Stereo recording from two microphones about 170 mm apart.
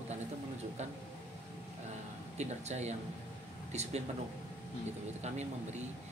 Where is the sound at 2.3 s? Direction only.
40° right (ahead or behind).